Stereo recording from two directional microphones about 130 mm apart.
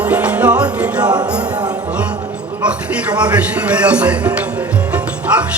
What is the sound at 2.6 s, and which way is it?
Speech, 10° right (ahead or behind).